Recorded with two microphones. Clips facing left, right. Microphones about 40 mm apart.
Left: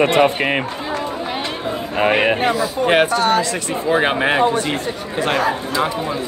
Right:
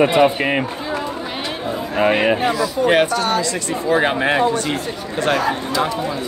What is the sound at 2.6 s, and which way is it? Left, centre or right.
Speech, left.